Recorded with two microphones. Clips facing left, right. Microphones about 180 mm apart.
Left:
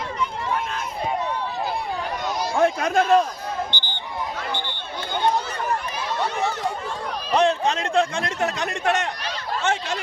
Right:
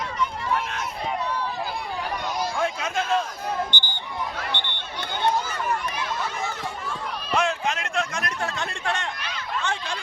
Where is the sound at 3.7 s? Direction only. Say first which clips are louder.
Even; 50° right (ahead or behind).